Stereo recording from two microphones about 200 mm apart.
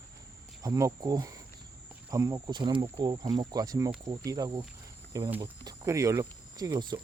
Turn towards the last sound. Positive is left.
turn(degrees=-20)  # may be behind; listen again after turning